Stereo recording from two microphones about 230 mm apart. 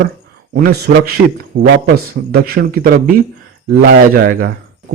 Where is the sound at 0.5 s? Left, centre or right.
Right.